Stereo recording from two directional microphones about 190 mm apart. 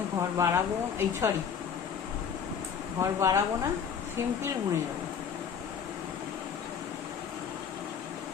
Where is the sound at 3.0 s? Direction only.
15° right (ahead or behind).